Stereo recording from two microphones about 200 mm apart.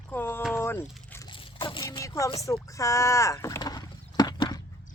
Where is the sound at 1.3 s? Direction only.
25° left (ahead or behind).